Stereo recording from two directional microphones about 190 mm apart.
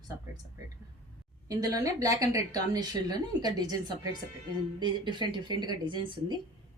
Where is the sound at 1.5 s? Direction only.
20° right (ahead or behind).